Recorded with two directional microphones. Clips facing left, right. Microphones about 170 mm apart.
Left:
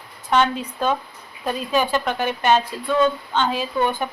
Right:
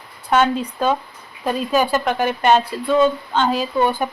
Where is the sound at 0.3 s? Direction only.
5° right (ahead or behind).